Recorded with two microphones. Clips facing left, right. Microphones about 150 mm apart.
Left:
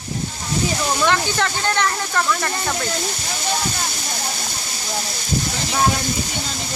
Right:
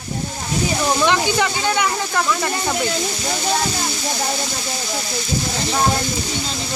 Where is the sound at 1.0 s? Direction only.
15° right (ahead or behind).